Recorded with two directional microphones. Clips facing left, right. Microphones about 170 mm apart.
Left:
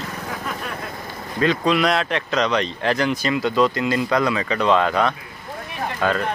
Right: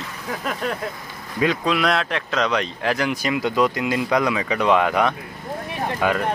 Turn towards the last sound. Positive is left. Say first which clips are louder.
# even
turn(degrees=-15)  # may be behind; listen again after turning